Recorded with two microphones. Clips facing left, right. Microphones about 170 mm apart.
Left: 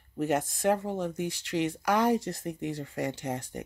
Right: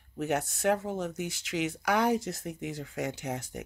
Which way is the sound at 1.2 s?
90° right.